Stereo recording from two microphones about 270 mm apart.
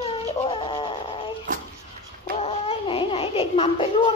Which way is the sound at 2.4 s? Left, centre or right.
Left.